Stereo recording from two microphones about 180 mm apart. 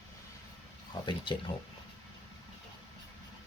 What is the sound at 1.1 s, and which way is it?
Speech, 25° left (ahead or behind).